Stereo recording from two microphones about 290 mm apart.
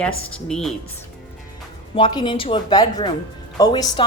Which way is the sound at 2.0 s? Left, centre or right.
Centre.